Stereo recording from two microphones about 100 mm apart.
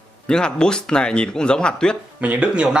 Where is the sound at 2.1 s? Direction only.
15° right (ahead or behind).